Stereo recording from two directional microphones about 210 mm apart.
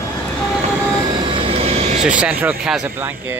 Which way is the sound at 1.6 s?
30° right (ahead or behind).